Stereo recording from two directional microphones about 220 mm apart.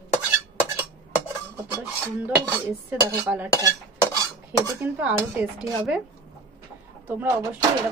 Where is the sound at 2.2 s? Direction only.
10° right (ahead or behind).